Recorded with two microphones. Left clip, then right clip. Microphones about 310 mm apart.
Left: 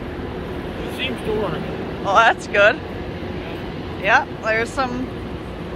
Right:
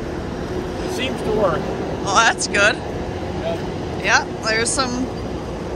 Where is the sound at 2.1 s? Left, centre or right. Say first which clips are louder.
Left 1 dB; centre.